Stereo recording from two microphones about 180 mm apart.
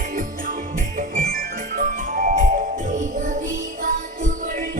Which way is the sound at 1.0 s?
50° right (ahead or behind).